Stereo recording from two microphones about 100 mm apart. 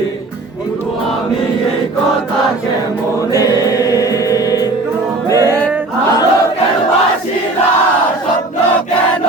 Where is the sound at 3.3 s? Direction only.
35° left (ahead or behind).